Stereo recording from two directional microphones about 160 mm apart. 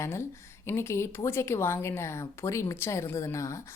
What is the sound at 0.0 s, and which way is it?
A woman's voice, 15° left (ahead or behind).